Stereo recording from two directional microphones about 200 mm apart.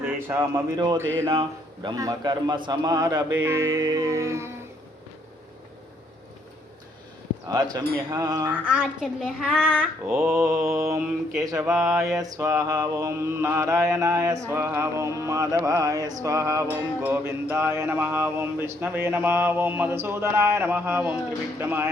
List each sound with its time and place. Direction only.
0.0 s mantra: 15° right (ahead or behind)
1.3 s a man's voice: 25° right (ahead or behind)
3.4 s mantra: 15° right (ahead or behind)
7.4 s a man's voice: 20° right (ahead or behind)
8.6 s a child's voice: 5° right (ahead or behind)
10.8 s mantra: 15° right (ahead or behind)
11.7 s a child's voice: centre (ahead or behind)
11.9 s mantra: 15° right (ahead or behind)